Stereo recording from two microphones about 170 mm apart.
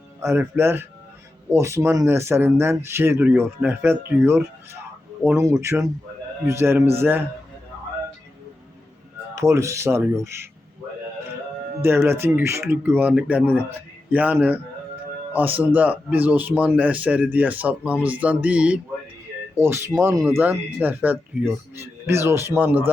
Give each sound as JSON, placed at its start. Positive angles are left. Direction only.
{"t": 0.2, "sound": "speech", "side_deg": -15}
{"t": 9.3, "sound": "speech", "side_deg": -15}
{"t": 11.8, "sound": "speech", "side_deg": -15}